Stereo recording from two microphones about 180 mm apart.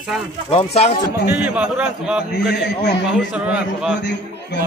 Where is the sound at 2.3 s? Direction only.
70° left (ahead or behind).